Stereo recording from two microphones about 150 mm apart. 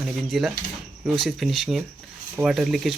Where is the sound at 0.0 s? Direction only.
Centre (ahead or behind).